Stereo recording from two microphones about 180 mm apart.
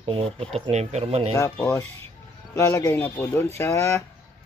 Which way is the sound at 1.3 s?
15° left (ahead or behind).